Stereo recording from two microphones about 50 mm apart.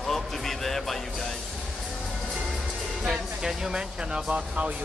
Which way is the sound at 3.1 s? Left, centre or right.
Centre.